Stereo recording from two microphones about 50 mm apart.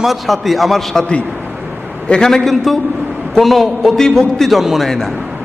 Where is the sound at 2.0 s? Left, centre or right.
Centre.